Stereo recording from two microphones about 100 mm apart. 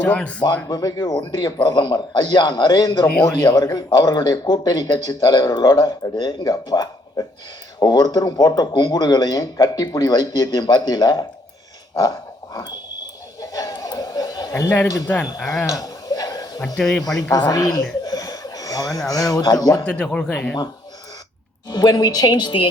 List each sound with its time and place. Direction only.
0.0 s speech: 10° left (ahead or behind)
0.4 s a man's voice: 40° left (ahead or behind)
13.4 s chuckle: 35° left (ahead or behind)
14.8 s speech: 35° left (ahead or behind)
15.6 s chuckle: 35° left (ahead or behind)
16.6 s speech: 5° left (ahead or behind)
17.2 s speech: 40° left (ahead or behind)
18.0 s a sound: 40° left (ahead or behind)
19.1 s speech: 40° left (ahead or behind)
19.8 s speech: 10° left (ahead or behind)
21.7 s a man's voice: 40° left (ahead or behind)